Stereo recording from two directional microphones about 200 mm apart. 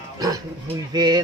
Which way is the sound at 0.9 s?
20° right (ahead or behind).